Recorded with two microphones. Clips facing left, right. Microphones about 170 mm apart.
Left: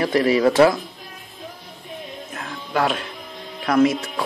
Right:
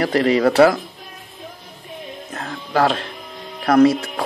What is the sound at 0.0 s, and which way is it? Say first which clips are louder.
Speech: right 1 dB; 65° right (ahead or behind).